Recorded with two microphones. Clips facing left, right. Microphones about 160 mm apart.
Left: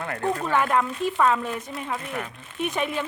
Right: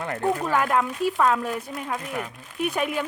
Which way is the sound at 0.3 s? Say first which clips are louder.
Even; 5° right (ahead or behind).